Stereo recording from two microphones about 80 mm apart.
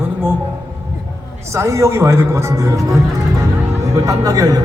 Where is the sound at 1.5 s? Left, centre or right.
Right.